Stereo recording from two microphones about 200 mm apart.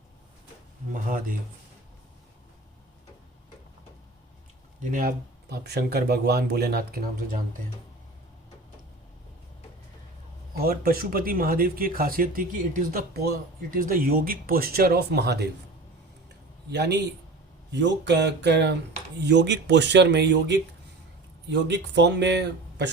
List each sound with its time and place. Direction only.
0.9 s speech: 45° right (ahead or behind)
4.8 s speech: 40° right (ahead or behind)
10.6 s speech: 45° right (ahead or behind)
16.7 s speech: 55° right (ahead or behind)
21.7 s speech: 60° right (ahead or behind)